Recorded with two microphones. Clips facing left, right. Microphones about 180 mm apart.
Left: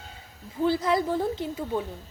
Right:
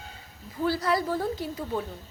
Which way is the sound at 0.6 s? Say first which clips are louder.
Left 2 dB; 20° left (ahead or behind).